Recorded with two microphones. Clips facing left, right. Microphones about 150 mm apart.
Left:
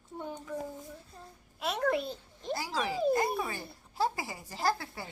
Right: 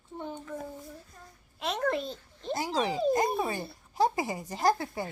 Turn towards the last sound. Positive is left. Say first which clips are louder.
# right 5 dB
turn(degrees=-20)  # may be behind; listen again after turning